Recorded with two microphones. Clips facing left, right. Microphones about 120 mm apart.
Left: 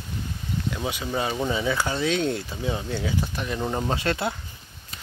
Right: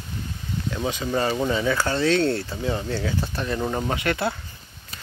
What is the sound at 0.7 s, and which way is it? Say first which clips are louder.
Speech: right 5 dB; 5° left (ahead or behind).